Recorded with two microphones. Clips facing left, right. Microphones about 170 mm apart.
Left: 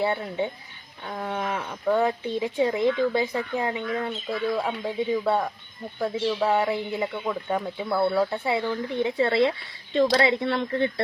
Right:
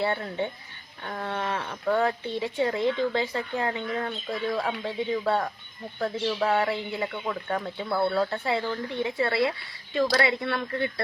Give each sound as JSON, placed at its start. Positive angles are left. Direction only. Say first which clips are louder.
{"t": 0.0, "sound": "speech", "louder": "left 2 dB", "side_deg": 15}
{"t": 7.9, "sound": "speech", "louder": "left 2 dB", "side_deg": 0}
{"t": 8.1, "sound": "speech", "louder": "left 2 dB", "side_deg": 15}
{"t": 9.0, "sound": "speech", "louder": "left 4 dB", "side_deg": 25}